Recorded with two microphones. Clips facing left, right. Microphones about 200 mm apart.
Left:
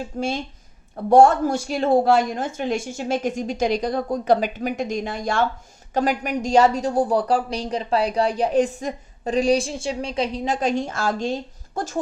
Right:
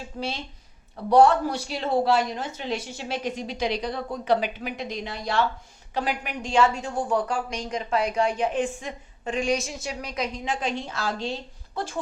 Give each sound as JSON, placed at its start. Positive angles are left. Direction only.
{"t": 0.2, "sound": "a woman's voice", "side_deg": 50}